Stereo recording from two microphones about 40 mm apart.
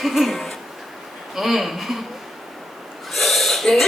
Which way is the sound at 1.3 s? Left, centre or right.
Centre.